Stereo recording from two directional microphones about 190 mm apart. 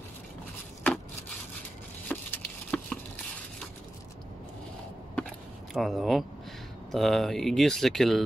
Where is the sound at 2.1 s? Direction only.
5° left (ahead or behind).